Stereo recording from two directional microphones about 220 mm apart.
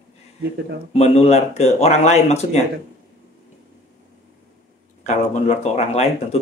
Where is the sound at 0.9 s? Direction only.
30° left (ahead or behind).